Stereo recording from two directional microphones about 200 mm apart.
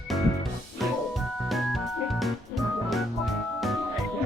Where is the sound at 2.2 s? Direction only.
Centre (ahead or behind).